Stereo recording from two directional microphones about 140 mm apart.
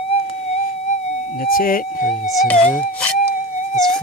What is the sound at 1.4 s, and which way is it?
Speech, 90° left.